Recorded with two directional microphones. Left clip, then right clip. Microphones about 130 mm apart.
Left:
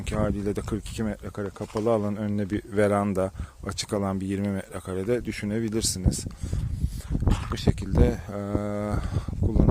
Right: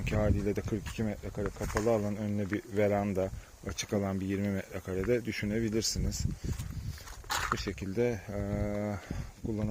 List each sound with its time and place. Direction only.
0.1 s speech: 55° left (ahead or behind)
0.9 s speech: 90° left; by 6.1 s 55° left (ahead or behind)
7.5 s speech: 65° left (ahead or behind)